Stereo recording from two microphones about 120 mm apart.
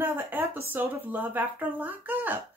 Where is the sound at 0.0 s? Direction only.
15° right (ahead or behind).